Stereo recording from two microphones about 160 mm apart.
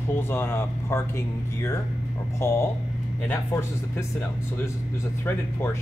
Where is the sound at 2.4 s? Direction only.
15° left (ahead or behind).